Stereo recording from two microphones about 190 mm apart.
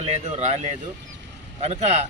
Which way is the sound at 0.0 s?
35° right (ahead or behind).